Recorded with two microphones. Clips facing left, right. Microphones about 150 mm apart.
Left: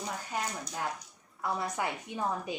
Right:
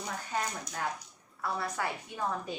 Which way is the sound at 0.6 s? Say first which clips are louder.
Even; 10° left (ahead or behind).